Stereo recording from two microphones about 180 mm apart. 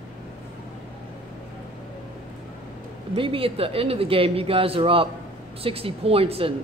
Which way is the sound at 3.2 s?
30° right (ahead or behind).